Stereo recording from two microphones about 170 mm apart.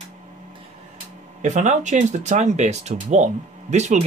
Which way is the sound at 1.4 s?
45° right (ahead or behind).